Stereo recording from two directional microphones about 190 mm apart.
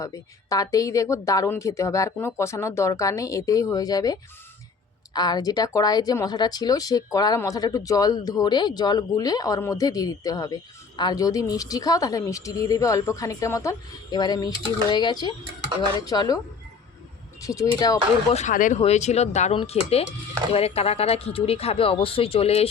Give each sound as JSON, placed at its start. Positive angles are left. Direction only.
{"t": 0.0, "sound": "a woman's voice", "side_deg": 20}
{"t": 17.4, "sound": "speech", "side_deg": 15}
{"t": 18.3, "sound": "speech", "side_deg": 35}